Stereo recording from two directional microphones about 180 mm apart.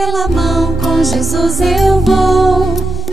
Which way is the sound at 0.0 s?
Centre (ahead or behind).